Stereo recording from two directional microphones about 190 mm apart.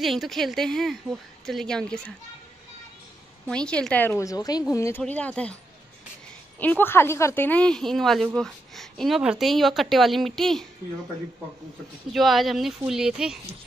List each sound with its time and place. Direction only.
0.0 s speech: centre (ahead or behind)
3.4 s a woman's voice: 5° left (ahead or behind)
6.6 s a woman's voice: 10° left (ahead or behind)
12.1 s speech: centre (ahead or behind)